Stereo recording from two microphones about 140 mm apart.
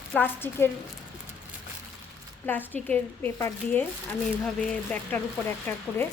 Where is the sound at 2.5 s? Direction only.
15° left (ahead or behind).